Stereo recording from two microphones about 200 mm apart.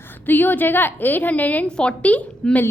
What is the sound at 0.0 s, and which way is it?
A woman's voice, 10° left (ahead or behind).